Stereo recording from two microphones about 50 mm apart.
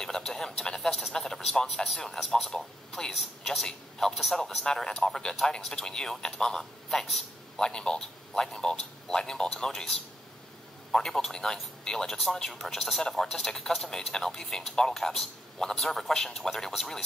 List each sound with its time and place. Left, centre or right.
0.0 s speech: centre
3.2 s a woman's voice: centre
4.6 s speech: centre